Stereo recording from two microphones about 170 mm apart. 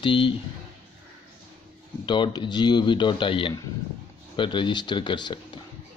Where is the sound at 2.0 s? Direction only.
25° left (ahead or behind).